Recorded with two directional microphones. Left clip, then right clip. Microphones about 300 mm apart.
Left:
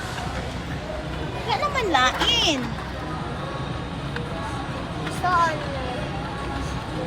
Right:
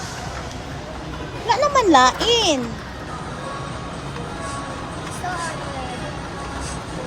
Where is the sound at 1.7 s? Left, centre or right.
Centre.